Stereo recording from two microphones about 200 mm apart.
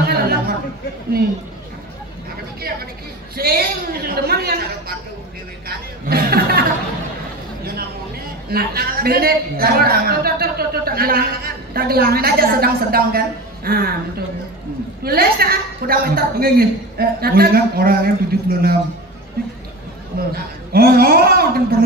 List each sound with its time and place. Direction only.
0.0 s chatter: 50° right (ahead or behind)
3.3 s a sound: 50° right (ahead or behind)
5.7 s chatter: 50° right (ahead or behind)
8.5 s a man's voice: 50° right (ahead or behind)